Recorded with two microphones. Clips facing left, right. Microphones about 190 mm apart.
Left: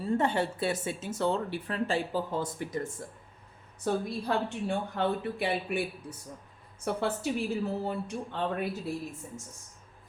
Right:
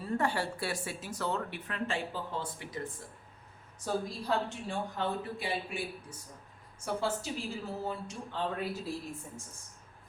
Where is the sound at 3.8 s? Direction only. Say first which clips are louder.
Left 4 dB; 60° left (ahead or behind).